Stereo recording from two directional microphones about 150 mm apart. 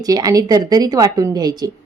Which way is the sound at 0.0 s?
25° right (ahead or behind).